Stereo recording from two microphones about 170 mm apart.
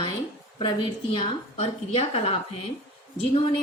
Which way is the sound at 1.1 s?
30° left (ahead or behind).